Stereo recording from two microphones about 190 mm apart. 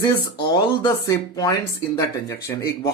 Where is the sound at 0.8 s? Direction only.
20° left (ahead or behind).